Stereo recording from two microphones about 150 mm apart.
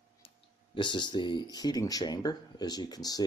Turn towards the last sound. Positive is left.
turn(degrees=25)  # may be behind; listen again after turning